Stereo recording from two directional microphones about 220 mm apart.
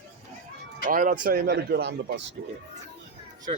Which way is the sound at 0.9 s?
40° right (ahead or behind).